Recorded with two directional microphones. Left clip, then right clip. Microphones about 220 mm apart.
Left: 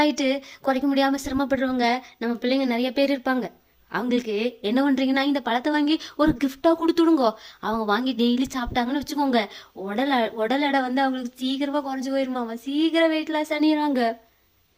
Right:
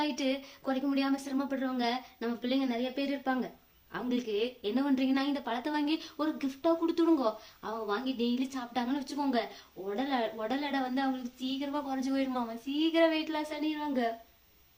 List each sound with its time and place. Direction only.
0.1 s speech: 35° left (ahead or behind)